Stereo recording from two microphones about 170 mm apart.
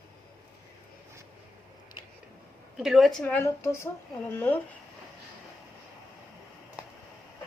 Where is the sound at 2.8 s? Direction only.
Centre (ahead or behind).